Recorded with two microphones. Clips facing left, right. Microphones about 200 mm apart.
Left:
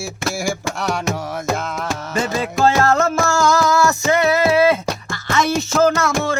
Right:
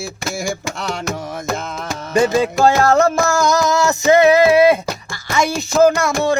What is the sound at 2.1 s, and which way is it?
Music, 15° right (ahead or behind).